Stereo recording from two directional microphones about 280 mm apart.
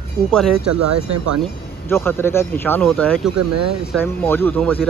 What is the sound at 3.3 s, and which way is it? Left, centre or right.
Speech, right.